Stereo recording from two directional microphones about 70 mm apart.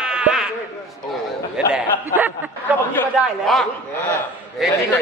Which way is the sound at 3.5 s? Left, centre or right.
Centre.